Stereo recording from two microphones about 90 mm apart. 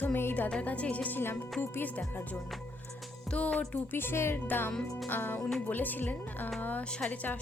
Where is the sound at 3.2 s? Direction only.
15° left (ahead or behind).